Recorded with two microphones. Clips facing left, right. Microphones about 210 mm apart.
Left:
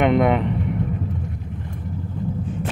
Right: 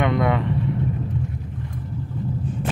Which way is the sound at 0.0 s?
20° left (ahead or behind).